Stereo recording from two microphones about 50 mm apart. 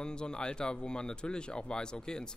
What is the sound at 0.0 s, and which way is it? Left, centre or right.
Speech, centre.